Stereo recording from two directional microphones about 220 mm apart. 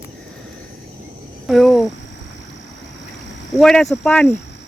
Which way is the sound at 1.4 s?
Centre (ahead or behind).